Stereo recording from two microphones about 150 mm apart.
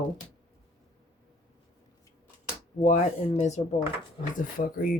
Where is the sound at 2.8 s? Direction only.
50° left (ahead or behind).